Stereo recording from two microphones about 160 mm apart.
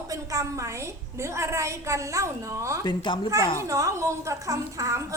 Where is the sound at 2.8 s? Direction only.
25° left (ahead or behind).